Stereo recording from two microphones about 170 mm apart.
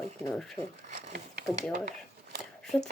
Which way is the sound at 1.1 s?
75° right (ahead or behind).